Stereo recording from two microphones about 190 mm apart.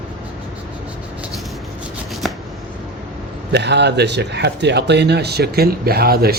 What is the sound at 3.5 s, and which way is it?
Speech, 65° right (ahead or behind).